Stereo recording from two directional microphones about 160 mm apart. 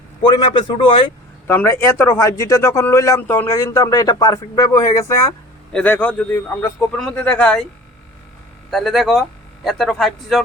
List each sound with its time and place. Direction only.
0.5 s speech: 30° left (ahead or behind)
1.5 s a man's voice: 15° left (ahead or behind)
8.7 s speech: centre (ahead or behind)